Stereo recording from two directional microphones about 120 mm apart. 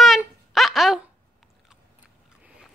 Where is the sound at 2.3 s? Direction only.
10° right (ahead or behind).